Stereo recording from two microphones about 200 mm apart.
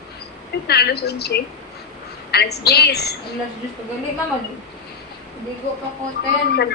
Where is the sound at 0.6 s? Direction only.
55° left (ahead or behind).